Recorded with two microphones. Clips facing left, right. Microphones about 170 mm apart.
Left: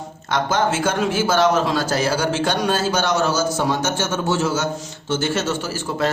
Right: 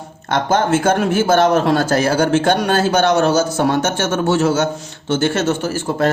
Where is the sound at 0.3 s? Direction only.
55° right (ahead or behind).